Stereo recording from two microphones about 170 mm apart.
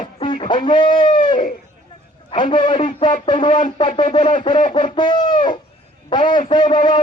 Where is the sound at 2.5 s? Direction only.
30° left (ahead or behind).